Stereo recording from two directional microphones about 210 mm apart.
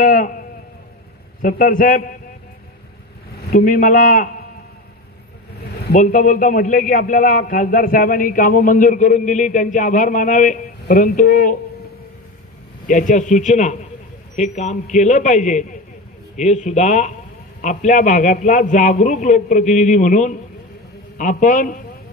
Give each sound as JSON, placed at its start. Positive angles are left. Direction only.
{"t": 0.0, "sound": "sheep", "side_deg": 45}
{"t": 1.4, "sound": "a man's voice", "side_deg": 40}
{"t": 3.4, "sound": "a man's voice", "side_deg": 40}
{"t": 5.6, "sound": "a man's voice", "side_deg": 45}
{"t": 12.8, "sound": "a man's voice", "side_deg": 40}